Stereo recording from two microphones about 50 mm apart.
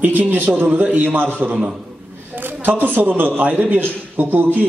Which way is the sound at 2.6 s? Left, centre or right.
Right.